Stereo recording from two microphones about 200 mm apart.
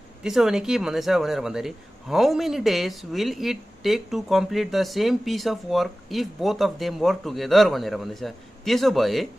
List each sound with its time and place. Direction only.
0.2 s speech: centre (ahead or behind)